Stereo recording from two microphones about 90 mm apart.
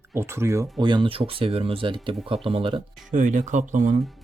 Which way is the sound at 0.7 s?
60° right (ahead or behind).